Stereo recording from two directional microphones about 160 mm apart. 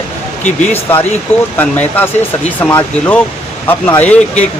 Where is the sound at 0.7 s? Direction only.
15° left (ahead or behind).